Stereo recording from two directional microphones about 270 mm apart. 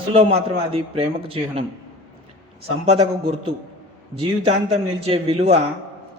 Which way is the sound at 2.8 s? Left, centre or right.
Right.